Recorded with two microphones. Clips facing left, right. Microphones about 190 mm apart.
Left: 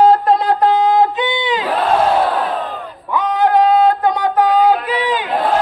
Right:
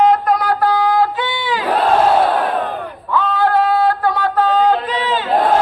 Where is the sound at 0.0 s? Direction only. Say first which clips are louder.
Left 2 dB; 30° left (ahead or behind).